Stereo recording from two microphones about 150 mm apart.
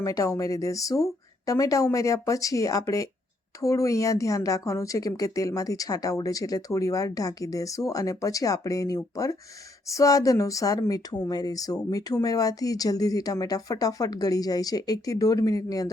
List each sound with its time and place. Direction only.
0.0 s speech: 25° left (ahead or behind)